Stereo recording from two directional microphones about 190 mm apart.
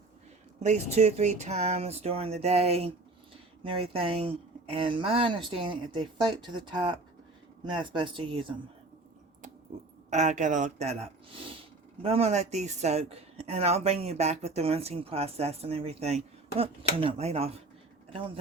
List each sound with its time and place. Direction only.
0.6 s speech: 35° right (ahead or behind)
10.1 s speech: 40° right (ahead or behind)